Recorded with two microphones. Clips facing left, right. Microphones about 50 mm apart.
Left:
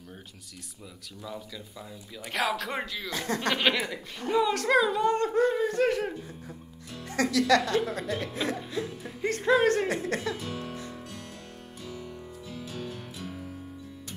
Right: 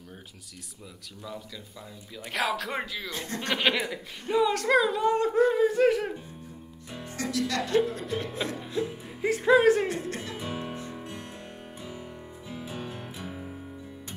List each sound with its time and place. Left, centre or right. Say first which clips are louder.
2.1 s speech: even; centre
7.1 s speech: left 7 dB; left
8.0 s speech: even; centre
8.5 s music: right 2 dB; centre
8.8 s speech: right 1 dB; centre
9.2 s speech: right 3 dB; centre
10.3 s music: right 1 dB; centre